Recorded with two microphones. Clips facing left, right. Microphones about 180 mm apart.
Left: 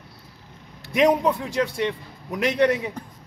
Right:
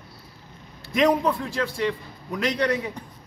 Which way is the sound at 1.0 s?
20° left (ahead or behind).